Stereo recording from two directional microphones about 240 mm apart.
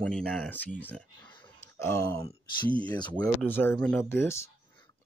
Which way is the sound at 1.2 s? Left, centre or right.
Centre.